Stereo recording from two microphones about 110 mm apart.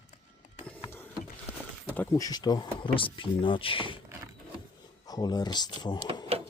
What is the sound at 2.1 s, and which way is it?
Speech, 35° left (ahead or behind).